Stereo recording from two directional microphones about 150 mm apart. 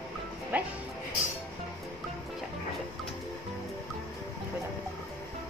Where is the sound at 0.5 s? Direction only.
10° right (ahead or behind).